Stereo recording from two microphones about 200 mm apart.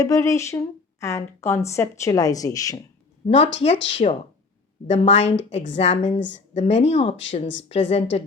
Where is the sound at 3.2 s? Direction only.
30° left (ahead or behind).